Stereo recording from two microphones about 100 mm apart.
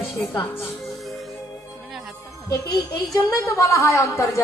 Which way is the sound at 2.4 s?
35° left (ahead or behind).